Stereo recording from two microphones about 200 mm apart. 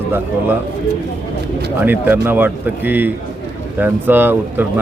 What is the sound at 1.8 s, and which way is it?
A man's voice, 10° right (ahead or behind).